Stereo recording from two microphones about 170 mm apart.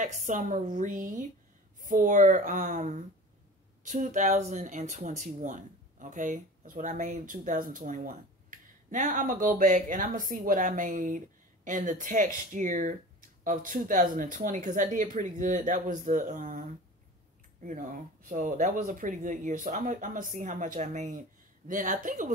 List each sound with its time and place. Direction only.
0.0 s speech: 50° right (ahead or behind)
17.6 s speech: 50° right (ahead or behind)